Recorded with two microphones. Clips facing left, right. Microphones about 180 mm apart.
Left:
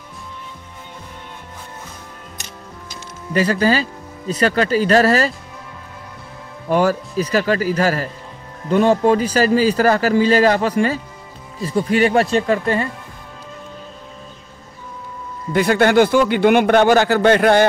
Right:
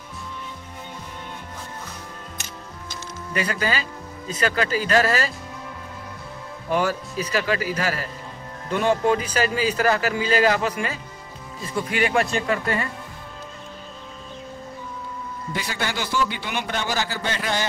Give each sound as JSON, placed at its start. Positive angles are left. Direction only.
{"t": 3.3, "sound": "a man's voice", "side_deg": 35}
{"t": 6.7, "sound": "a man's voice", "side_deg": 40}
{"t": 15.5, "sound": "speech", "side_deg": 55}